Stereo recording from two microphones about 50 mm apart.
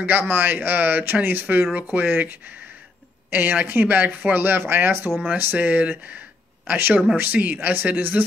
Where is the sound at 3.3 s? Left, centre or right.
Right.